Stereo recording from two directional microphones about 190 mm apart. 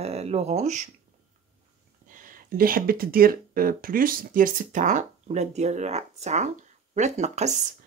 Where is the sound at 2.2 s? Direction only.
50° right (ahead or behind).